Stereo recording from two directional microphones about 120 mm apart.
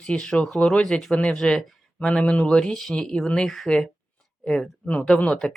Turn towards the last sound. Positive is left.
turn(degrees=5)  # may be behind; listen again after turning